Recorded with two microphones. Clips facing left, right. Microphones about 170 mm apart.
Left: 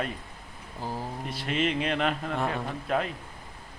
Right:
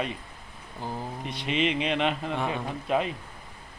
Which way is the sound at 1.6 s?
5° right (ahead or behind).